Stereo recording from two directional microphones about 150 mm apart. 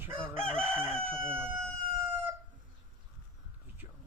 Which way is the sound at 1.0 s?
15° right (ahead or behind).